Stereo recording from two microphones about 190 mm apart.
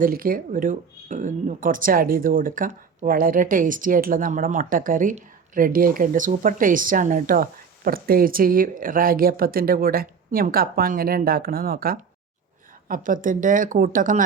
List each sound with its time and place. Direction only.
0.0 s speech: 50° right (ahead or behind)